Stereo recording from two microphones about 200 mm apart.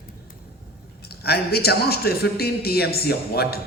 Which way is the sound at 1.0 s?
50° left (ahead or behind).